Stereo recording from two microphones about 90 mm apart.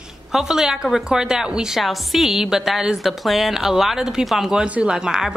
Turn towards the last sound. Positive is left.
turn(degrees=-5)  # may be behind; listen again after turning